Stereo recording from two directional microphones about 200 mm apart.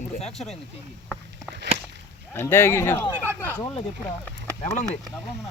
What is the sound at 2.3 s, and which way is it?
Speech, 10° left (ahead or behind).